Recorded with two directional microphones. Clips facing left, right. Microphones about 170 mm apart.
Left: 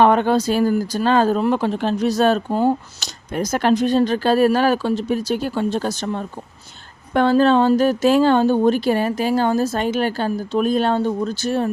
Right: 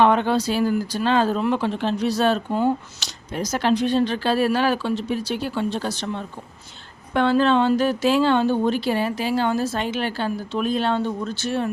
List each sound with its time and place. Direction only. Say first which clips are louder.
0.0 s speech: left 3 dB; 45° left (ahead or behind)
3.3 s speech: left 3 dB; 50° left (ahead or behind)